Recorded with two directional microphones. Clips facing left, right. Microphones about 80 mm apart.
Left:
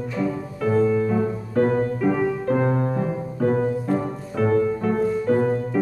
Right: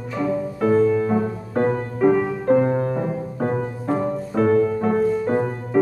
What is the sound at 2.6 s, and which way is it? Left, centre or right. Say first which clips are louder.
Music: right 2 dB; centre.